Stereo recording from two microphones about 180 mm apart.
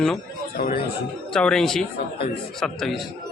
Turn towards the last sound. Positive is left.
turn(degrees=0)  # may be behind; listen again after turning